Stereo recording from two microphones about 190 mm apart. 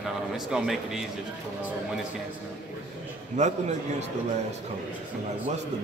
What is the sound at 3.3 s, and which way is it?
Speech, 35° right (ahead or behind).